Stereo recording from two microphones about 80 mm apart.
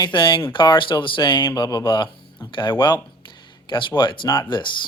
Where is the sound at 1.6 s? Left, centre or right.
Left.